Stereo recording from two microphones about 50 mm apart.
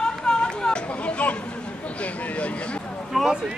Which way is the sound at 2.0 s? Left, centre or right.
Left.